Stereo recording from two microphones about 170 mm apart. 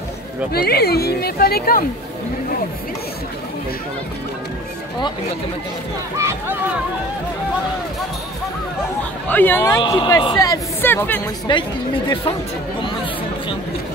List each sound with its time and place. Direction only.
0.5 s speech: 65° left (ahead or behind)
6.1 s speech: 15° right (ahead or behind)
9.3 s speech: 10° left (ahead or behind)
9.8 s speech: 25° left (ahead or behind); by 11.2 s 10° left (ahead or behind)
11.5 s speech: 30° left (ahead or behind)